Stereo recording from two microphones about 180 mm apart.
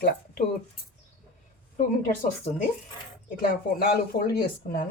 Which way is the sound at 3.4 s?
55° left (ahead or behind).